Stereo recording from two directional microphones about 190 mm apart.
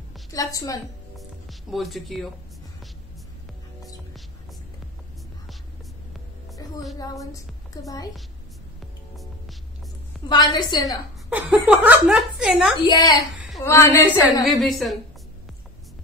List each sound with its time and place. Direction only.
0.3 s a woman's voice: 20° left (ahead or behind)
1.1 s music: centre (ahead or behind)
6.6 s music: 20° left (ahead or behind)
7.7 s a woman's voice: 20° left (ahead or behind)
9.1 s hum: centre (ahead or behind)
10.2 s a woman's voice: 20° left (ahead or behind)
10.9 s speech: 5° right (ahead or behind)
12.7 s a woman's voice: 20° left (ahead or behind)
14.4 s speech: centre (ahead or behind)